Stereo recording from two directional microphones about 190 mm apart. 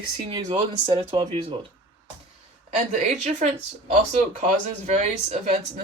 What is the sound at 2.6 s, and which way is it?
Speech, 40° right (ahead or behind).